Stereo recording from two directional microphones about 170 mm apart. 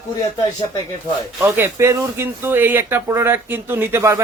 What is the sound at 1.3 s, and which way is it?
Speech, 15° right (ahead or behind).